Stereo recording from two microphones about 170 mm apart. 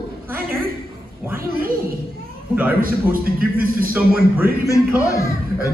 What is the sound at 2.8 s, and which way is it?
A man's voice, 55° right (ahead or behind).